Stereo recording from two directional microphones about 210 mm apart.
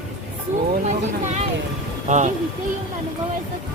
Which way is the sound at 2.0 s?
35° right (ahead or behind).